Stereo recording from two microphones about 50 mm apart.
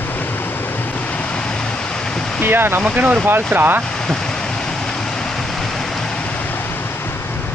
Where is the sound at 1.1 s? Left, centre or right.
Left.